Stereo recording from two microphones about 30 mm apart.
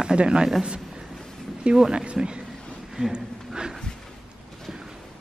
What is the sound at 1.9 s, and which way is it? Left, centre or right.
Speech, right.